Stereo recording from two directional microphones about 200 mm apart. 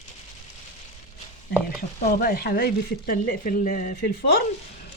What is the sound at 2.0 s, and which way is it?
Speech, 50° left (ahead or behind).